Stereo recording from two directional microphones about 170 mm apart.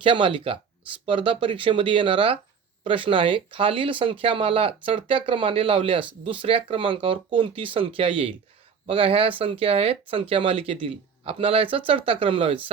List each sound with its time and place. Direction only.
0.0 s speech: 30° right (ahead or behind)